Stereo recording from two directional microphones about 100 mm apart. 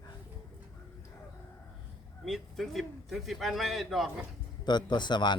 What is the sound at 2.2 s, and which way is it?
A man's voice, centre (ahead or behind).